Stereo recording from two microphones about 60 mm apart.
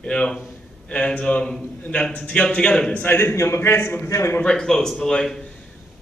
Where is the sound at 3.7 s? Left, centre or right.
Left.